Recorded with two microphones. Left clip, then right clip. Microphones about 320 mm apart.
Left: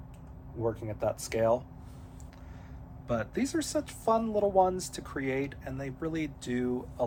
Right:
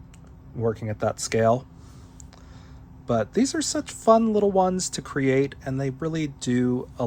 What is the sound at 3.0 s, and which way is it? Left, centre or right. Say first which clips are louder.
Speech: right 9 dB; centre.